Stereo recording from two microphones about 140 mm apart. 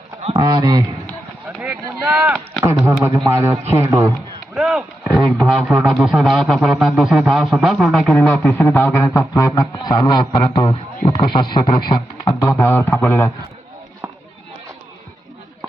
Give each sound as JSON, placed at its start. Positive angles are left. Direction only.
{"t": 0.3, "sound": "a man's voice", "side_deg": -30}
{"t": 1.6, "sound": "speech", "side_deg": -5}
{"t": 2.8, "sound": "a man's voice", "side_deg": -20}
{"t": 4.5, "sound": "a man's voice", "side_deg": -5}